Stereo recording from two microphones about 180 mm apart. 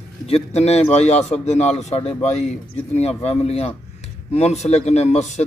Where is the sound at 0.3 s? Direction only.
35° left (ahead or behind).